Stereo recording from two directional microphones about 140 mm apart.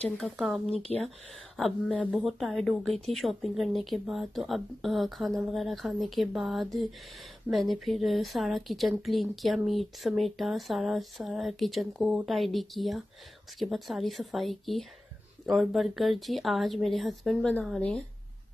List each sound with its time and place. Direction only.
0.2 s a woman's voice: centre (ahead or behind)
0.9 s speech: 10° left (ahead or behind)
2.0 s speech: 10° right (ahead or behind)
2.3 s a woman's voice: centre (ahead or behind)